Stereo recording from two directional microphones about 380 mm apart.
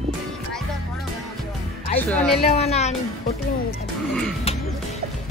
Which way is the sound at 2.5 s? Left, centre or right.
Centre.